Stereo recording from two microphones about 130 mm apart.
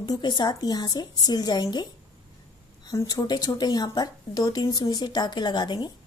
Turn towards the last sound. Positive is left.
turn(degrees=35)  # may be behind; listen again after turning